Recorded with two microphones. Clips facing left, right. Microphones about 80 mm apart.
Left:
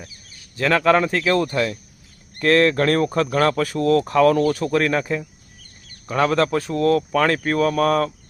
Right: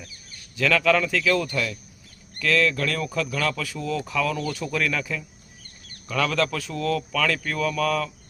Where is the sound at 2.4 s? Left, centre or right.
Left.